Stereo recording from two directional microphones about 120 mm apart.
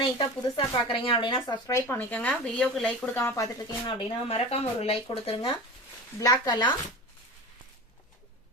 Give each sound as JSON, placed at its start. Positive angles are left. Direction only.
{"t": 0.0, "sound": "speech", "side_deg": 45}
{"t": 1.6, "sound": "speech", "side_deg": 25}
{"t": 3.2, "sound": "speech", "side_deg": 25}
{"t": 3.8, "sound": "speech", "side_deg": 50}
{"t": 6.1, "sound": "speech", "side_deg": 30}